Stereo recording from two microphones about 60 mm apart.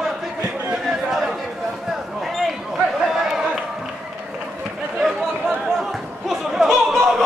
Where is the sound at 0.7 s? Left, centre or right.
Centre.